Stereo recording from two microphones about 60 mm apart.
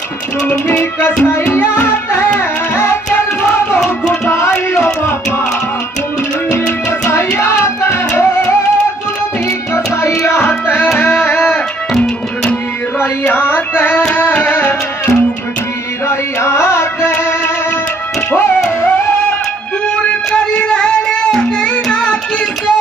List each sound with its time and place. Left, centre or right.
0.7 s music: left
2.7 s tabla: left
4.1 s music: left
7.1 s music: left
10.0 s music: left
13.3 s music: left
16.1 s carnatic music: left
20.3 s music: centre